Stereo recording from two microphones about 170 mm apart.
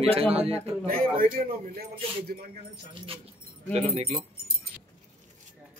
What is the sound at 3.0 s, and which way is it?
Speech, 35° right (ahead or behind).